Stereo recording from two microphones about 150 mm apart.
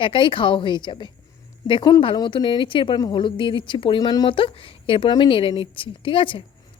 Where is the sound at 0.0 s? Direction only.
35° left (ahead or behind).